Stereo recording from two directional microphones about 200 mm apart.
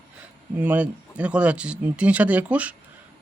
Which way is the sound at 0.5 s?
10° right (ahead or behind).